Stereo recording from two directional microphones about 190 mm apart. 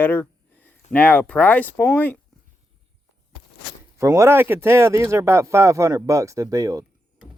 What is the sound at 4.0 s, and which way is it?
Speech, 15° right (ahead or behind).